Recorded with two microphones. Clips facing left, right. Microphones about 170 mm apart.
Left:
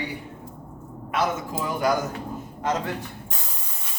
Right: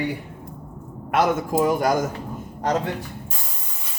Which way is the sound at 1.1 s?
50° right (ahead or behind).